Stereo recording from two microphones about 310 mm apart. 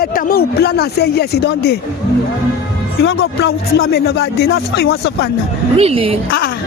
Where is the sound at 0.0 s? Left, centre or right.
Left.